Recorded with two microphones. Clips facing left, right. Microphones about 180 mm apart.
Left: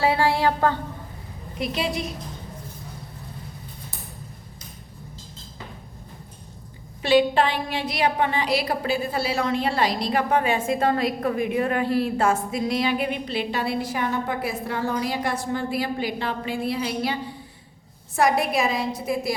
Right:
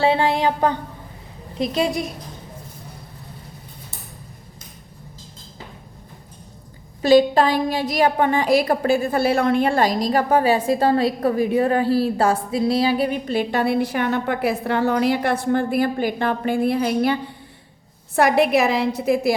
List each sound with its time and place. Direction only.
0.0 s a sound: 20° right (ahead or behind)
1.5 s a woman's voice: 40° right (ahead or behind)
7.0 s a woman's voice: 40° right (ahead or behind)
18.2 s a woman's voice: 65° right (ahead or behind)